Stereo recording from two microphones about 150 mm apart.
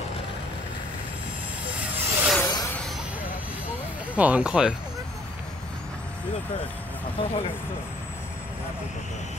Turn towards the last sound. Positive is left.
turn(degrees=40)  # may be behind; listen again after turning